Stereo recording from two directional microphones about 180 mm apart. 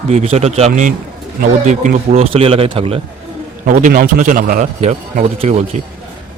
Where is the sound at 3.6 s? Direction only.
50° right (ahead or behind).